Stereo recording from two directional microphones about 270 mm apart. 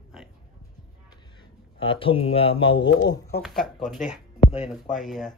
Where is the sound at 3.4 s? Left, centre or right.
Centre.